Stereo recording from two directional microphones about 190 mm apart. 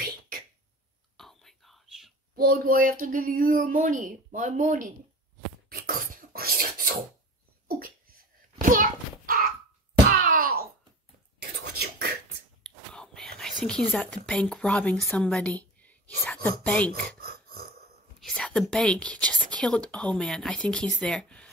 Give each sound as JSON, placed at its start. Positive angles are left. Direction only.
{"t": 1.1, "sound": "whispering", "side_deg": 0}
{"t": 2.3, "sound": "speech", "side_deg": -50}
{"t": 5.7, "sound": "filing", "side_deg": -50}
{"t": 8.5, "sound": "a sound", "side_deg": -45}
{"t": 11.3, "sound": "whispering", "side_deg": -55}
{"t": 12.6, "sound": "speech", "side_deg": 5}
{"t": 15.8, "sound": "whispering", "side_deg": 10}
{"t": 17.2, "sound": "a sound", "side_deg": -55}
{"t": 18.2, "sound": "speech", "side_deg": 5}